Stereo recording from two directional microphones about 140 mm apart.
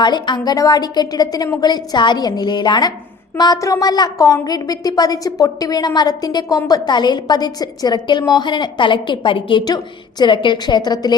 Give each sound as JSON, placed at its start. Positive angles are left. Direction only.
{"t": 0.0, "sound": "a woman's voice", "side_deg": 30}